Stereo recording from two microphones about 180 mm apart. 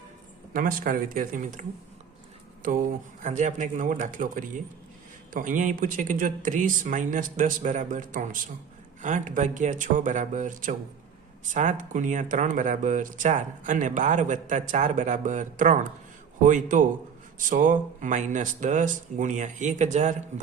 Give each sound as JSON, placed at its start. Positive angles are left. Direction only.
{"t": 0.5, "sound": "speech", "side_deg": -50}
{"t": 2.6, "sound": "speech", "side_deg": -45}